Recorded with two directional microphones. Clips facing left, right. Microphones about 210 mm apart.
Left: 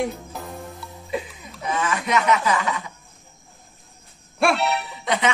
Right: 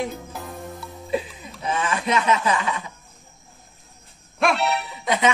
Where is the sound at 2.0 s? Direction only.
25° right (ahead or behind).